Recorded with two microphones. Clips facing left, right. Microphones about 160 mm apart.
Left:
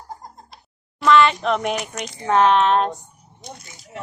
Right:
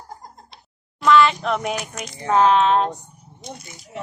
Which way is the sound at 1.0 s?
Centre (ahead or behind).